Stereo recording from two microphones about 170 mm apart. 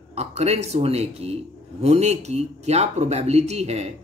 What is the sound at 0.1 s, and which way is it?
Speech, 40° right (ahead or behind).